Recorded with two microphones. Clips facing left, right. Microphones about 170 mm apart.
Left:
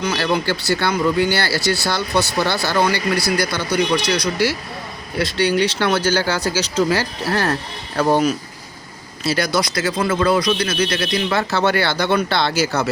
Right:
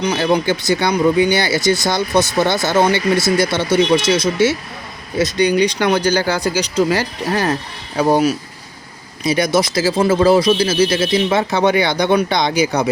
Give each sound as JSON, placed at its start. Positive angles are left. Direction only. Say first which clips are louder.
{"t": 0.0, "sound": "speech", "louder": "right 4 dB", "side_deg": -20}